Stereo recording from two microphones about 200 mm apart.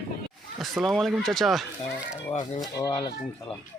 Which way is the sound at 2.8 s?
25° left (ahead or behind).